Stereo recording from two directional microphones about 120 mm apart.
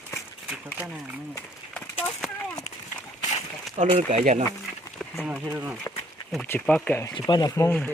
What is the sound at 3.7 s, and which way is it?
Speech, 75° right (ahead or behind).